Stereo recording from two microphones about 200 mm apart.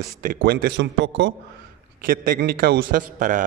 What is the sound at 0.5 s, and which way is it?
Speech, 55° right (ahead or behind).